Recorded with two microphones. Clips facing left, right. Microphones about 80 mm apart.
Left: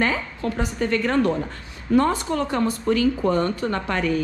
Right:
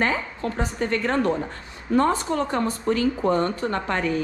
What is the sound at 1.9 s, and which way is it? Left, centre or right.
A woman's voice, right.